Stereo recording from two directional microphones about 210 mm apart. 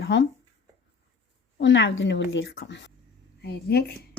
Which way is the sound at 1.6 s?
60° left (ahead or behind).